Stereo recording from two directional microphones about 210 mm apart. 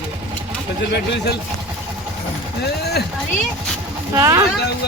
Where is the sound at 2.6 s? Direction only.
50° left (ahead or behind).